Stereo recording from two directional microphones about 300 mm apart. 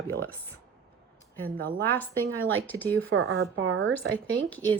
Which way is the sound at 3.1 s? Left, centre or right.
Right.